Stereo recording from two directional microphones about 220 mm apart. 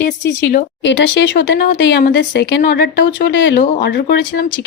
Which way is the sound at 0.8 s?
55° left (ahead or behind).